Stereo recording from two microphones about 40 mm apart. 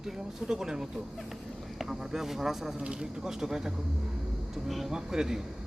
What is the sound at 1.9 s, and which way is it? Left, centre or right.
Speech, centre.